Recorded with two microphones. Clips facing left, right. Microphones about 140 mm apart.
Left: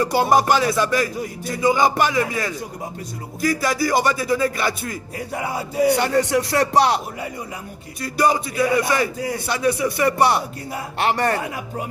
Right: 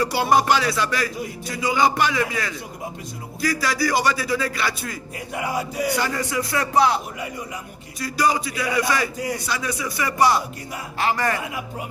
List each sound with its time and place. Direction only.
0.1 s music: 45° left (ahead or behind)
5.3 s music: 30° left (ahead or behind)
5.9 s speech: 70° left (ahead or behind)
8.0 s music: 55° left (ahead or behind)
9.6 s speech: 60° left (ahead or behind)
11.3 s music: 40° left (ahead or behind)